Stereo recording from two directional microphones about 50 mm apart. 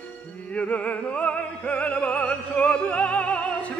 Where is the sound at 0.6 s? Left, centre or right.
Left.